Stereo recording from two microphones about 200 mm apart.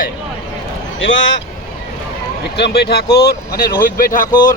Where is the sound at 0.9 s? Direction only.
70° left (ahead or behind).